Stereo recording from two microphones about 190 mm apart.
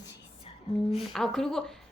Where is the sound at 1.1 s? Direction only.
Centre (ahead or behind).